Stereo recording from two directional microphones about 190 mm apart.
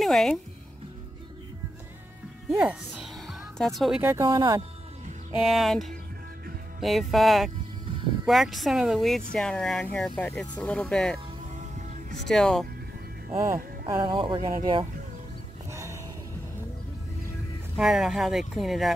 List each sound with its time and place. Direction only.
0.0 s speech: centre (ahead or behind)
2.5 s music: 5° right (ahead or behind)
4.0 s speech: 15° right (ahead or behind)
4.3 s speech: 25° right (ahead or behind)
5.3 s speech: centre (ahead or behind)
12.3 s speech: centre (ahead or behind)
13.8 s speech: 20° right (ahead or behind)
15.7 s music: 15° right (ahead or behind)
17.7 s speech: 5° right (ahead or behind)